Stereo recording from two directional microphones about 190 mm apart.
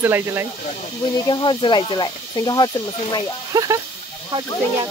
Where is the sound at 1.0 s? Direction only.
25° left (ahead or behind).